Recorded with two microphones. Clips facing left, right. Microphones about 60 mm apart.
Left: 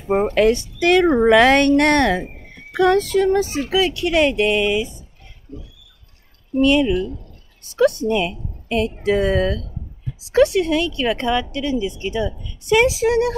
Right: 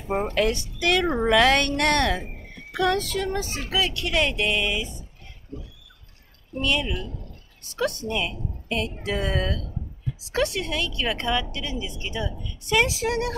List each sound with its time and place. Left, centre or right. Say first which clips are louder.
0.1 s a woman's voice: left 8 dB; left; by 4.8 s centre
6.6 s a woman's voice: left 10 dB; centre
10.3 s speech: left 10 dB; centre